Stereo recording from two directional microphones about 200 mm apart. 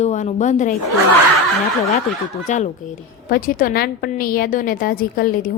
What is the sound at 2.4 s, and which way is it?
A woman's voice, 40° left (ahead or behind).